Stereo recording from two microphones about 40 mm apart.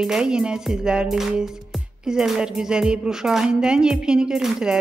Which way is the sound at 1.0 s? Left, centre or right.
Centre.